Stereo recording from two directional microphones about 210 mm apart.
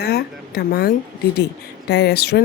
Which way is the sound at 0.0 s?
50° left (ahead or behind).